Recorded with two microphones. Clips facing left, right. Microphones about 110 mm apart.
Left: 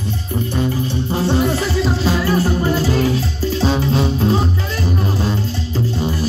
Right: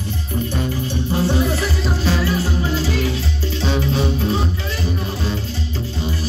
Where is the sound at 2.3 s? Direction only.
50° left (ahead or behind); by 4.4 s 35° left (ahead or behind).